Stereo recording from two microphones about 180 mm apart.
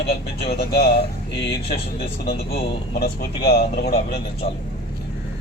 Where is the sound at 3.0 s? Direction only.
60° left (ahead or behind).